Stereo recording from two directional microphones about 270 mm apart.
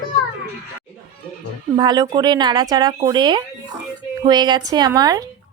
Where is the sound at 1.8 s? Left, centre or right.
Centre.